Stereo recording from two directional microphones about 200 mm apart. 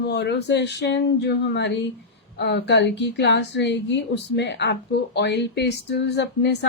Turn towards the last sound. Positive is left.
turn(degrees=55)  # may be behind; listen again after turning